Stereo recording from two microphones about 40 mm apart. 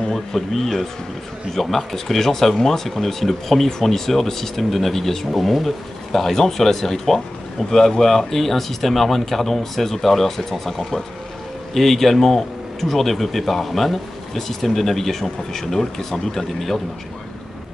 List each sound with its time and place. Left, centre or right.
0.1 s speech: centre